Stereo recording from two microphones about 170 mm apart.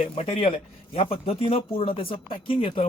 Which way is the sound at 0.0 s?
35° left (ahead or behind).